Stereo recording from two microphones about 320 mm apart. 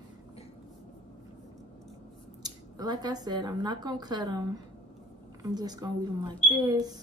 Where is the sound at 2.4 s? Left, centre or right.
Centre.